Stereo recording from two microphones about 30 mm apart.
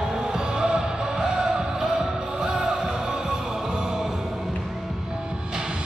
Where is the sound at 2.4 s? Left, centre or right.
Right.